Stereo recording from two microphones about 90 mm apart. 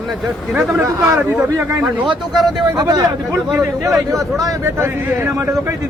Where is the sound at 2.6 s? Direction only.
45° right (ahead or behind).